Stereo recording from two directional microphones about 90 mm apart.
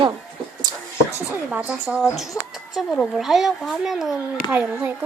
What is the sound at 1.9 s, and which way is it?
Speech, centre (ahead or behind).